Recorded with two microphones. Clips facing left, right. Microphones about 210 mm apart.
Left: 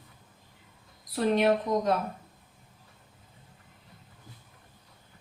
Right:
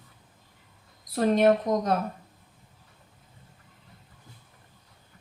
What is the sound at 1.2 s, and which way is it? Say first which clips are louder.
Speech: right 3 dB; 45° right (ahead or behind).